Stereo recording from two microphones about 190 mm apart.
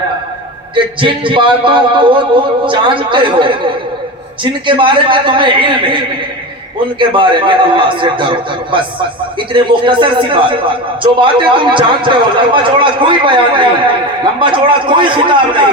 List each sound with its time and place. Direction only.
1.0 s a man's voice: 25° right (ahead or behind)
4.6 s a man's voice: 25° right (ahead or behind)
7.0 s a man's voice: 25° right (ahead or behind)
9.5 s a man's voice: 25° right (ahead or behind)